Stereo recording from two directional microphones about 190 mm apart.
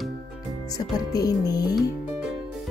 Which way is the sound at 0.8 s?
20° left (ahead or behind).